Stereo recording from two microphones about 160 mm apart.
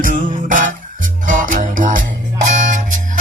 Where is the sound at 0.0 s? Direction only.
55° right (ahead or behind).